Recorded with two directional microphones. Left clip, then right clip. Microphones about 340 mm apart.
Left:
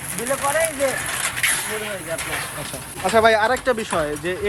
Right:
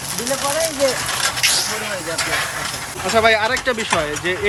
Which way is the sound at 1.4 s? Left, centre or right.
Centre.